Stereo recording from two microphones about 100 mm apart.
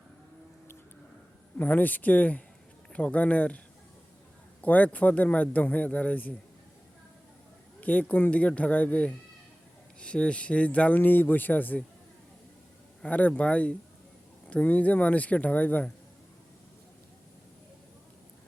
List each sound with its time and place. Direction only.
1.5 s speech: 20° left (ahead or behind)
4.6 s speech: 15° left (ahead or behind)
7.8 s speech: 15° left (ahead or behind)
13.0 s speech: 15° left (ahead or behind)